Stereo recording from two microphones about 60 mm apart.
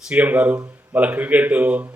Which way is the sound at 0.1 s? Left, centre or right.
Right.